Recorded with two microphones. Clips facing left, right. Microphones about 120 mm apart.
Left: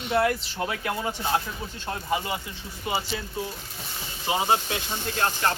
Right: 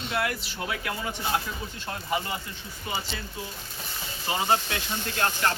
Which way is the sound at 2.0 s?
20° left (ahead or behind).